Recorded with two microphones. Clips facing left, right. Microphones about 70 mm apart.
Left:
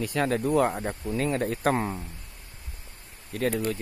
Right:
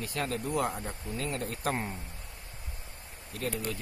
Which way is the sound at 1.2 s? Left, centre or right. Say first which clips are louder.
Left 8 dB; left.